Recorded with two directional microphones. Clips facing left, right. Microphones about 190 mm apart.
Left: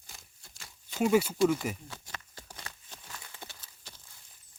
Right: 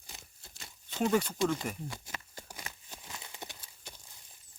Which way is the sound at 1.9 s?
10° right (ahead or behind).